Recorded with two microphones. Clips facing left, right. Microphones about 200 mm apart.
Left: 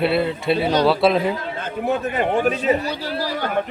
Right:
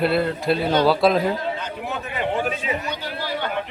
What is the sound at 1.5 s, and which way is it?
A man's voice, 50° left (ahead or behind).